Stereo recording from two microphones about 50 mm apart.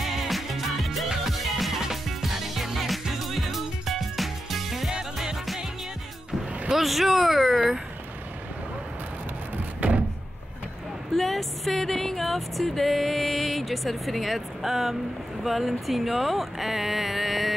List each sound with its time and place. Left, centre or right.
0.0 s music: centre
6.7 s speech: centre
7.5 s a sound: centre
9.8 s door: right
11.1 s music: centre
15.4 s speech: centre